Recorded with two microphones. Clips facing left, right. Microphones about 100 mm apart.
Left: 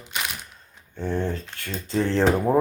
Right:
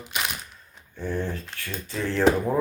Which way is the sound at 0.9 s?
25° left (ahead or behind).